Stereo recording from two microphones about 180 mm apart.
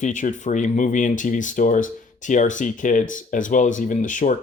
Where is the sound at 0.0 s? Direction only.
45° left (ahead or behind).